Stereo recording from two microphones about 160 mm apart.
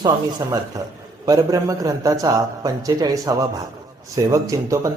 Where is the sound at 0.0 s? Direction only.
25° right (ahead or behind).